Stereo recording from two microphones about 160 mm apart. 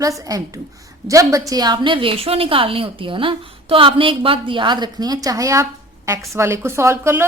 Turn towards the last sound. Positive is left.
turn(degrees=-15)  # may be behind; listen again after turning